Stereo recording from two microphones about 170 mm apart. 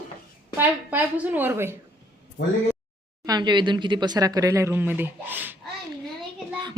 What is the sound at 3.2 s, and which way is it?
Speech, 25° right (ahead or behind).